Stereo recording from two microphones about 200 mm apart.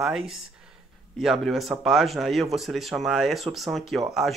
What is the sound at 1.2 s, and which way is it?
Speech, centre (ahead or behind).